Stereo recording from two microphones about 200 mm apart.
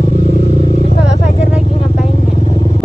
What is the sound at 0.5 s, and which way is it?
Vehicle, 40° right (ahead or behind).